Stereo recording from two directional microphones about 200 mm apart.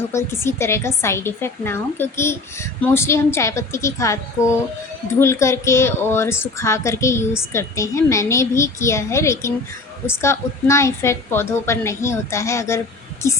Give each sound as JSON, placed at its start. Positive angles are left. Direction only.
{"t": 0.1, "sound": "a woman's voice", "side_deg": 15}